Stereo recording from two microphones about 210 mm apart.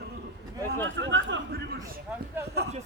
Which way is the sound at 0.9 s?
60° right (ahead or behind).